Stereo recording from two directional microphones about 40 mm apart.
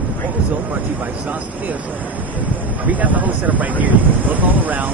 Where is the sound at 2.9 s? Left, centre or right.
Right.